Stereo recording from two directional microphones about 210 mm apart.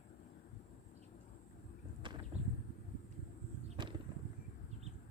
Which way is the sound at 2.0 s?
20° right (ahead or behind).